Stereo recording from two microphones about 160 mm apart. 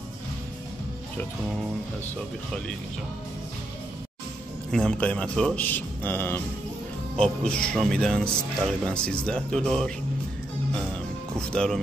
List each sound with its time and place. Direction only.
4.6 s a man's voice: 5° left (ahead or behind)
11.3 s speech: 5° left (ahead or behind)